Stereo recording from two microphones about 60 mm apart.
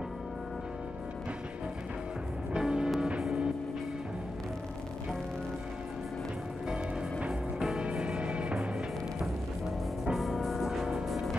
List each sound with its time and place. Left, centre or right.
2.5 s music: centre
6.7 s music: centre
10.1 s music: centre